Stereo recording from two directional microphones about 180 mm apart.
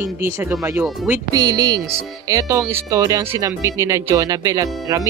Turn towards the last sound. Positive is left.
turn(degrees=-15)  # may be behind; listen again after turning